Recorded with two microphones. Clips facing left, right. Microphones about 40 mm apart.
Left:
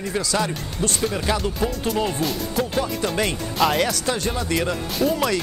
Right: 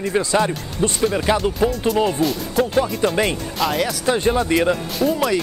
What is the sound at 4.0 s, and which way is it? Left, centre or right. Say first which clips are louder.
Speech: right 6 dB; centre.